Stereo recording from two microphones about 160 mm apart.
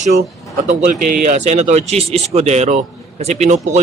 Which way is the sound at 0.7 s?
50° right (ahead or behind).